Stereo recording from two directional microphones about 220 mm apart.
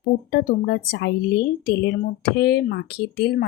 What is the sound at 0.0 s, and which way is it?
Speech, 45° left (ahead or behind).